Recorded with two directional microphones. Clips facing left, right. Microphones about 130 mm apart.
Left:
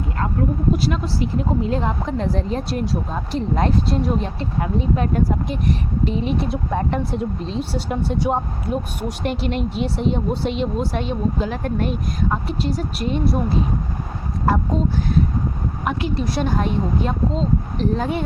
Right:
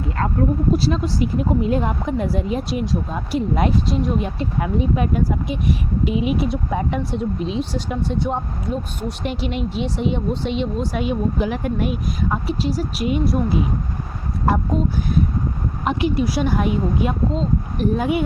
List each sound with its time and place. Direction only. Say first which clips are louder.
0.8 s speech: right 2 dB; 30° right (ahead or behind)
1.0 s speech: right 2 dB; 15° right (ahead or behind)
2.6 s speech: right 1 dB; centre (ahead or behind)
3.3 s speech: right 1 dB; 10° right (ahead or behind)
3.8 s speech: even; centre (ahead or behind)
4.8 s speech: even; 10° right (ahead or behind)
7.7 s speech: left 1 dB; 5° left (ahead or behind)
9.2 s speech: left 2 dB; centre (ahead or behind)
14.4 s speech: even; 15° right (ahead or behind)
16.2 s speech: right 2 dB; 5° right (ahead or behind)